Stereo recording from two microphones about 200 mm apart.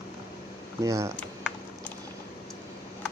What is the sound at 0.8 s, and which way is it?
Speech, 15° right (ahead or behind).